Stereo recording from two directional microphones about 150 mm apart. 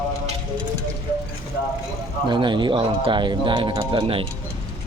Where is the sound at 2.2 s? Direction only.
30° right (ahead or behind).